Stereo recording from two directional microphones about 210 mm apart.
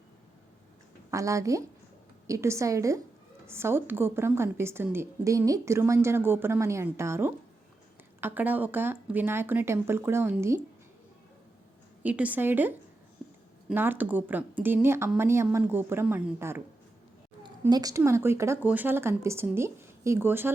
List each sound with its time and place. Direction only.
1.1 s a woman's voice: 15° right (ahead or behind)
12.0 s a woman's voice: 5° right (ahead or behind)
17.6 s a woman's voice: 15° right (ahead or behind)